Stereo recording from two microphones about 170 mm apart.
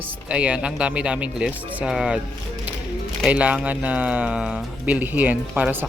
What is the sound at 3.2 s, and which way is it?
Speech, 10° right (ahead or behind).